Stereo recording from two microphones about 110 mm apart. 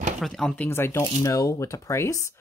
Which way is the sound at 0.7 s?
20° left (ahead or behind).